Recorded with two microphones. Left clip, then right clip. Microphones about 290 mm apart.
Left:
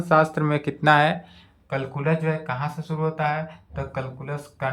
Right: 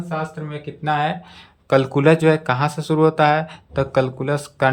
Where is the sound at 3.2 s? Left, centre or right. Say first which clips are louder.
Right 7 dB; centre.